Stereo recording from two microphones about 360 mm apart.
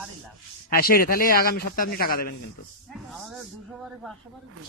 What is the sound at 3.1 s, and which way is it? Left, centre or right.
A woman's voice, centre.